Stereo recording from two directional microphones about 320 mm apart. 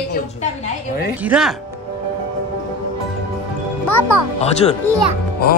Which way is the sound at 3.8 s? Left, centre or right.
Left.